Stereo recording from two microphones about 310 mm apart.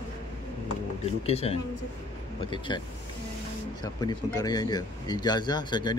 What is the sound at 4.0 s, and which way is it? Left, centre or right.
Speech, centre.